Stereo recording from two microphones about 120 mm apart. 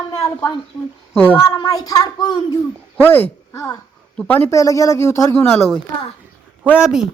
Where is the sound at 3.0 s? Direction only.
15° left (ahead or behind).